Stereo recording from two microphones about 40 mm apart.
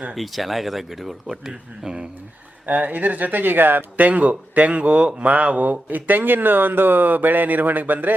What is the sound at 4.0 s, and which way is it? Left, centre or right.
Speech, right.